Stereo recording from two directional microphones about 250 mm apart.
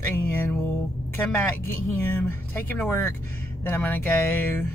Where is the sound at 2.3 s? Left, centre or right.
Centre.